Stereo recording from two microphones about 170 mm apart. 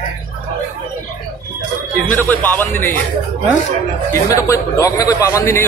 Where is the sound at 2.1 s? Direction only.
10° left (ahead or behind).